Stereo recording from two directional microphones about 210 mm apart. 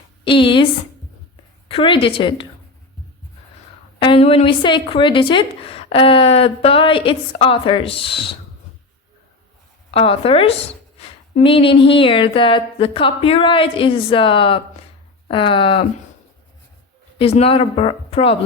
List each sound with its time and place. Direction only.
0.3 s a woman's voice: 25° left (ahead or behind)
1.6 s a woman's voice: 25° left (ahead or behind)
4.0 s a woman's voice: 25° left (ahead or behind)
9.9 s a woman's voice: 25° left (ahead or behind)
17.2 s a woman's voice: 30° left (ahead or behind)